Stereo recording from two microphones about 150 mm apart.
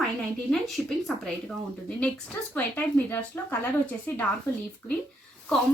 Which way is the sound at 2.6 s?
10° left (ahead or behind).